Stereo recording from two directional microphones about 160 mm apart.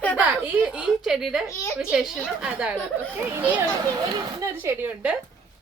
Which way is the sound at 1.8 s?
5° right (ahead or behind).